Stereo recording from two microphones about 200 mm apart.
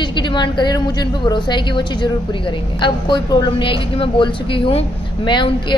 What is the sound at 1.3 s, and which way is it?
A woman's voice, 20° left (ahead or behind).